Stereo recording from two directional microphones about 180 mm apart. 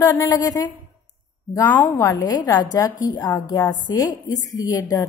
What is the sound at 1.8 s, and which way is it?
A woman's voice, 15° left (ahead or behind).